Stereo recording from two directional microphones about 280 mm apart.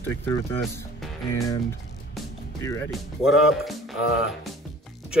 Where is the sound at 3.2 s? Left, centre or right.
Centre.